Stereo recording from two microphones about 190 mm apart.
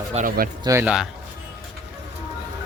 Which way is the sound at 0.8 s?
5° right (ahead or behind).